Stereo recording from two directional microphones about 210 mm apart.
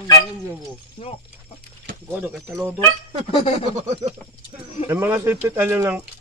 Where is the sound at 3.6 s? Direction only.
30° right (ahead or behind).